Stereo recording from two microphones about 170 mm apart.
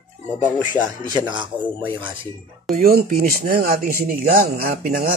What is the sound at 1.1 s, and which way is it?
Speech, 25° right (ahead or behind).